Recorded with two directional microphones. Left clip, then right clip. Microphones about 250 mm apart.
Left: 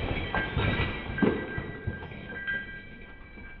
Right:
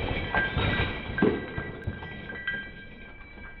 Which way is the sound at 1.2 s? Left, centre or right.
Centre.